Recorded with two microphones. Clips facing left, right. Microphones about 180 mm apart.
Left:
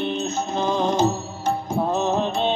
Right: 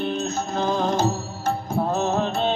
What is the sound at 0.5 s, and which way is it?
Music, 20° left (ahead or behind).